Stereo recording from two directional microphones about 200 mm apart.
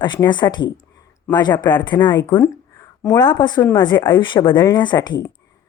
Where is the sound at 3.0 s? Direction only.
10° left (ahead or behind).